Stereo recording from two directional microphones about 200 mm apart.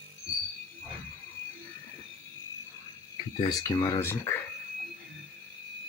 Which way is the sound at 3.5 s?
20° left (ahead or behind).